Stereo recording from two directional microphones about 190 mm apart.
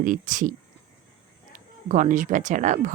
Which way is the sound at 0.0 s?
45° right (ahead or behind).